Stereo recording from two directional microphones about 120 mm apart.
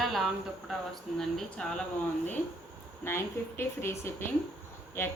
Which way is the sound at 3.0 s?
20° left (ahead or behind).